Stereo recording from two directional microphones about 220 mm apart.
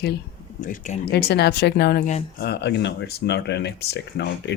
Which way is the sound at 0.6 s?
35° left (ahead or behind).